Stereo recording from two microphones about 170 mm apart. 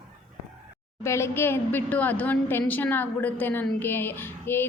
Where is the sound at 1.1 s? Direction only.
15° left (ahead or behind).